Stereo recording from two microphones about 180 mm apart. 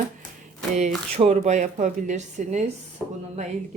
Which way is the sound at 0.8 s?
35° right (ahead or behind).